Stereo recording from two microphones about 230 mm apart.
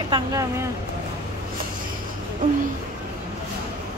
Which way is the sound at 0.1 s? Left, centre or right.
Centre.